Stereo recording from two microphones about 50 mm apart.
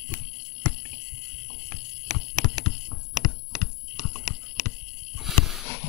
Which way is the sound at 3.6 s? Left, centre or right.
Centre.